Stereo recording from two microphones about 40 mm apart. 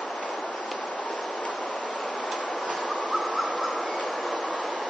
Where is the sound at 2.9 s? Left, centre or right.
Left.